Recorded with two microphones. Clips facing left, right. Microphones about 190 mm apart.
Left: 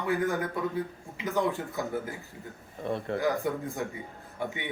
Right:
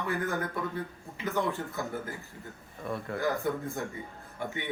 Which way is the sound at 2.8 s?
30° left (ahead or behind).